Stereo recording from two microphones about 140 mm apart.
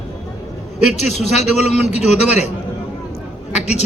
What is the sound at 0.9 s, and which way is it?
Speech, 55° left (ahead or behind).